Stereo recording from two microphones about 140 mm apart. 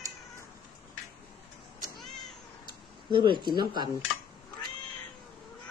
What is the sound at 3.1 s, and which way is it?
Speech, 35° right (ahead or behind).